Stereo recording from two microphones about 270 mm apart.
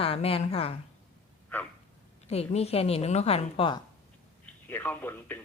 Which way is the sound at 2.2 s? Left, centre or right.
Left.